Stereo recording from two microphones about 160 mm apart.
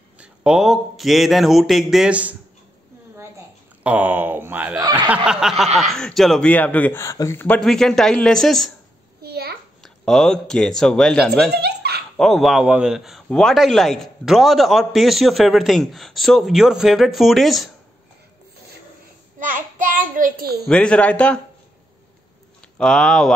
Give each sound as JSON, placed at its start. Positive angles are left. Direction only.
{"t": 0.2, "sound": "a man's voice", "side_deg": -5}
{"t": 3.8, "sound": "a man's voice", "side_deg": -10}
{"t": 9.2, "sound": "a sound", "side_deg": -75}
{"t": 9.8, "sound": "a man's voice", "side_deg": 0}
{"t": 11.5, "sound": "giggle", "side_deg": -85}
{"t": 12.2, "sound": "a man's voice", "side_deg": 0}
{"t": 19.4, "sound": "a child's voice", "side_deg": -60}
{"t": 20.6, "sound": "speech", "side_deg": 5}
{"t": 22.8, "sound": "a man's voice", "side_deg": 5}